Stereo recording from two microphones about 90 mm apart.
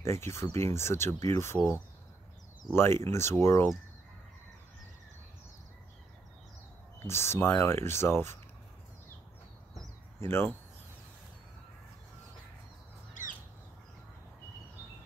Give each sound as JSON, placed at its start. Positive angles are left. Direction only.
{"t": 0.0, "sound": "speech", "side_deg": 30}
{"t": 2.7, "sound": "speech", "side_deg": 30}
{"t": 7.0, "sound": "speech", "side_deg": 30}
{"t": 10.2, "sound": "speech", "side_deg": 25}